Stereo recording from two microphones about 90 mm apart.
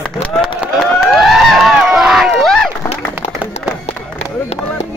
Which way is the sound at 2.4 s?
5° left (ahead or behind).